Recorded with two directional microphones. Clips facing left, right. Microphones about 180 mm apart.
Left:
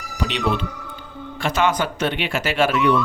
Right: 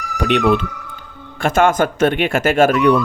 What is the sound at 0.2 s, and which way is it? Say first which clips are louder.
Speech: right 7 dB; 55° right (ahead or behind).